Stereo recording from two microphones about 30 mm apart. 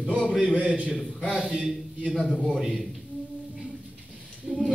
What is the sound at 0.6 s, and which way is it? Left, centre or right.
Speech, right.